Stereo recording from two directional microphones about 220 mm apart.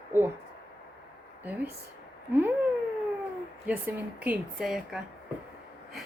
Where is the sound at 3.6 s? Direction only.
10° right (ahead or behind).